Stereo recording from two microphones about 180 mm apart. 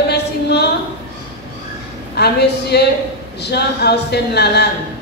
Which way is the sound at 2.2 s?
65° left (ahead or behind).